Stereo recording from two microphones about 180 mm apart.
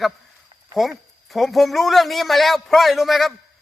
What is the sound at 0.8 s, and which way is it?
A man's voice, centre (ahead or behind).